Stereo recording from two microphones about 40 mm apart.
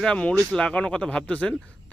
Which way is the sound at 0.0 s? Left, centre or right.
Left.